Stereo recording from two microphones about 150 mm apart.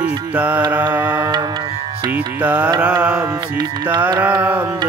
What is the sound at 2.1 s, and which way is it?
Music, 10° right (ahead or behind).